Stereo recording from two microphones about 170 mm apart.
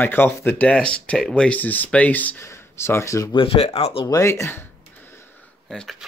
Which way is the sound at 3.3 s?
35° left (ahead or behind).